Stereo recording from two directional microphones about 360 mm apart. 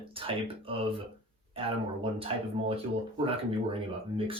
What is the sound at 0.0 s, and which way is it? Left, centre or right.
Speech, centre.